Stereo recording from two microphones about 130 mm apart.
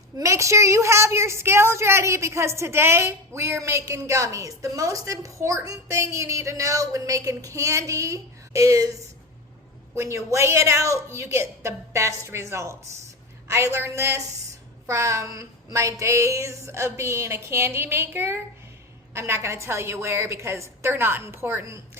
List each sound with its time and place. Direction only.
0.2 s a woman's voice: 25° right (ahead or behind)